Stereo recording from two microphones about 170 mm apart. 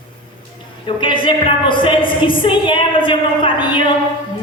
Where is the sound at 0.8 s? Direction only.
30° left (ahead or behind).